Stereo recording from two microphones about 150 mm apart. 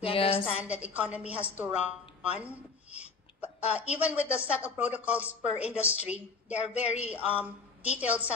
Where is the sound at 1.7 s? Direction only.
45° left (ahead or behind).